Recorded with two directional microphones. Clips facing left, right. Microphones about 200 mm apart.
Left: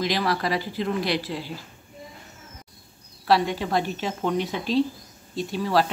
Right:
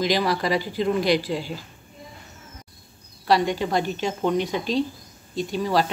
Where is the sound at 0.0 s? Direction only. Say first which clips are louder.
Right 2 dB; centre (ahead or behind).